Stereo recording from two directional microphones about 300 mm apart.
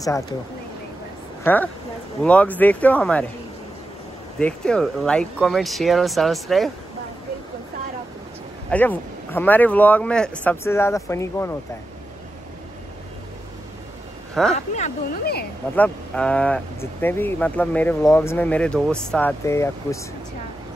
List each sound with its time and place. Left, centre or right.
1.4 s speech: centre
4.4 s speech: centre
8.6 s speech: centre
14.3 s speech: centre
14.8 s speech: left
15.7 s speech: centre